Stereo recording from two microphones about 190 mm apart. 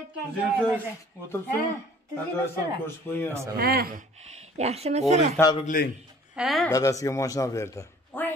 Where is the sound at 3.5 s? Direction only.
50° right (ahead or behind).